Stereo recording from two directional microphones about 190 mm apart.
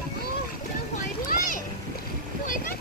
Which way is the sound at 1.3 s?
45° left (ahead or behind).